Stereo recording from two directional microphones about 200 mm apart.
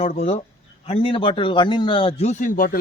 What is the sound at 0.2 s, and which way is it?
A man's voice, 30° left (ahead or behind).